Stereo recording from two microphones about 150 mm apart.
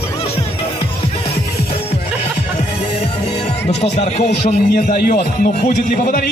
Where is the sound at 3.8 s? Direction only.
45° left (ahead or behind).